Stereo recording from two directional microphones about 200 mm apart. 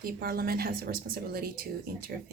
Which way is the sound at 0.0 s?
50° right (ahead or behind).